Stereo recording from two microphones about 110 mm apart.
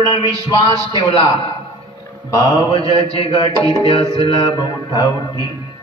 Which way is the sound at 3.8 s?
55° left (ahead or behind).